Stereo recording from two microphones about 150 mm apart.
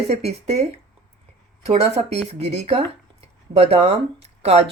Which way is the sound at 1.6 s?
45° right (ahead or behind).